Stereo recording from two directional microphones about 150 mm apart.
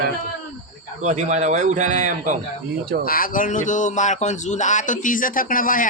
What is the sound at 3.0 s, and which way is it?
Speech, 70° left (ahead or behind).